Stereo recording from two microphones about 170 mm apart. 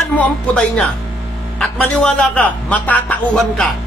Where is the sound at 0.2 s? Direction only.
5° left (ahead or behind).